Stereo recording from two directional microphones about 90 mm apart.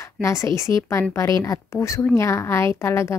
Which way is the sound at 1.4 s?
35° left (ahead or behind).